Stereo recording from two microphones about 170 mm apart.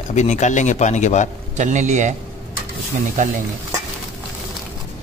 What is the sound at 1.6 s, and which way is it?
Speech, 45° right (ahead or behind).